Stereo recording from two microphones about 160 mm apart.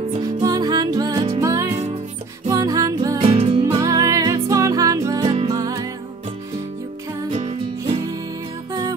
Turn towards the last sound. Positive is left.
turn(degrees=-40)  # may be behind; listen again after turning